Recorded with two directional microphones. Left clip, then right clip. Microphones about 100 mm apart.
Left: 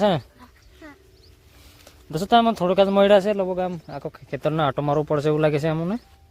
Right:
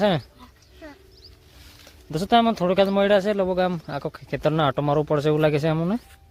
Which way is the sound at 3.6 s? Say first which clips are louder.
Right 4 dB; 30° right (ahead or behind).